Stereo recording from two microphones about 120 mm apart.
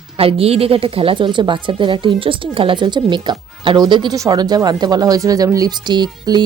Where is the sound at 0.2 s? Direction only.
55° right (ahead or behind).